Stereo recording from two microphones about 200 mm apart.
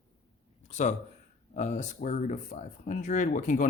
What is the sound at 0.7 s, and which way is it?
Speech, 35° left (ahead or behind).